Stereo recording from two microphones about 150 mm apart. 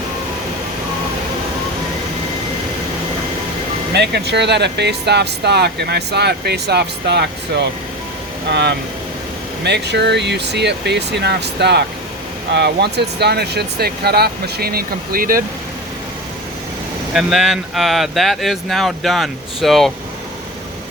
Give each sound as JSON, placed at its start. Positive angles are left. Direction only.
{"t": 3.9, "sound": "speech", "side_deg": -90}
{"t": 9.6, "sound": "speech", "side_deg": -90}
{"t": 17.2, "sound": "speech", "side_deg": 0}